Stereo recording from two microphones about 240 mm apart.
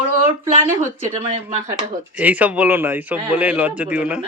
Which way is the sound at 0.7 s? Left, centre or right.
Centre.